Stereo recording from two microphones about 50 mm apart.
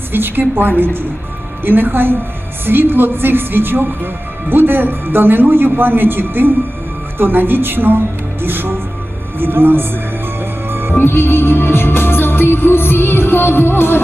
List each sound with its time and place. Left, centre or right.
0.1 s a woman's voice: right
10.7 s music: right
10.9 s music: left